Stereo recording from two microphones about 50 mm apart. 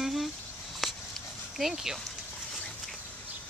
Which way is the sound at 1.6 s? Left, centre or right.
Centre.